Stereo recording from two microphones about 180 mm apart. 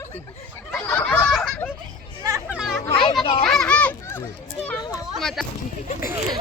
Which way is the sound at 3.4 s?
5° left (ahead or behind).